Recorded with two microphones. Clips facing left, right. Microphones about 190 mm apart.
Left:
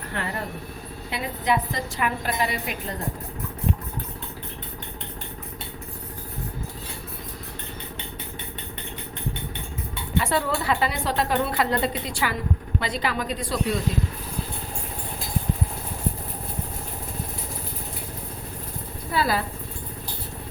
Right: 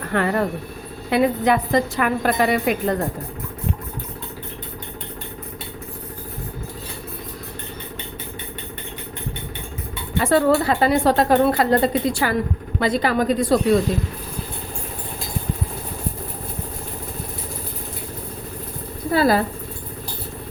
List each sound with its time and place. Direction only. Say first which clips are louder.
0.1 s a woman's voice: right 11 dB; 60° right (ahead or behind)
10.2 s a woman's voice: right 8 dB; 45° right (ahead or behind)
19.1 s a sound: right 7 dB; 45° right (ahead or behind)